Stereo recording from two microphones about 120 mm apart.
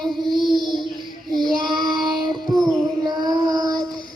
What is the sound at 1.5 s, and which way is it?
Child singing, 40° right (ahead or behind).